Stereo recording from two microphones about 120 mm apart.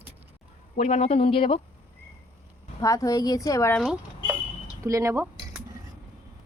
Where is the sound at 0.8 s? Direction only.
65° left (ahead or behind); by 1.6 s 50° left (ahead or behind).